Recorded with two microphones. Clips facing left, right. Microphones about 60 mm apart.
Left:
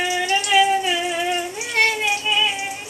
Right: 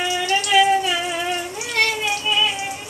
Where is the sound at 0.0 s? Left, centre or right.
Centre.